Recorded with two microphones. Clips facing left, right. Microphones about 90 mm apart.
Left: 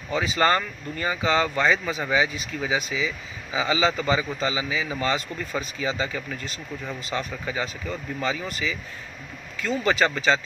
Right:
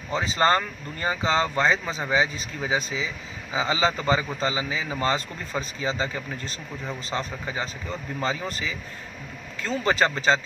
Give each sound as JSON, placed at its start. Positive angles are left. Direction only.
{"t": 0.1, "sound": "speech", "side_deg": -30}